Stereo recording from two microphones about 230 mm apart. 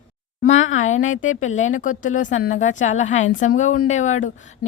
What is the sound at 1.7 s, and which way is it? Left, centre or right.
Speech, left.